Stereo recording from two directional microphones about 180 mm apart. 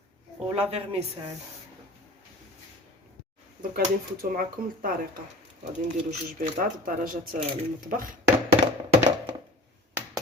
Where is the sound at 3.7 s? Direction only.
55° right (ahead or behind).